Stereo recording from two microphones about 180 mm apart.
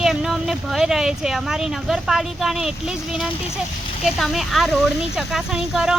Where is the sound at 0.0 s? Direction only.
Centre (ahead or behind).